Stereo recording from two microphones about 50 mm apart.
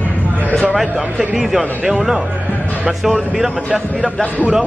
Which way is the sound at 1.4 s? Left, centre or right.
Centre.